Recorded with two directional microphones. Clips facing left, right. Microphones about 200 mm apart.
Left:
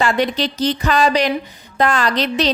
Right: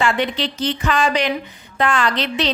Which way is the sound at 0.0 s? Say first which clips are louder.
Left 2 dB; 40° left (ahead or behind).